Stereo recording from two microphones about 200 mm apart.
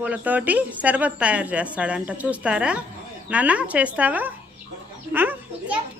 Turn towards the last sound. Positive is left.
turn(degrees=-10)  # may be behind; listen again after turning